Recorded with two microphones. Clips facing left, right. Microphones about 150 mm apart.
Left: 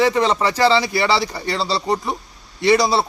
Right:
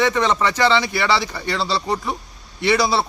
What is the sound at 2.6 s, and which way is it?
Speech, 35° left (ahead or behind).